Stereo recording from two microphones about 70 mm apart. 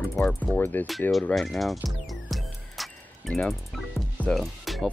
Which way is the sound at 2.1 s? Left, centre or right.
Centre.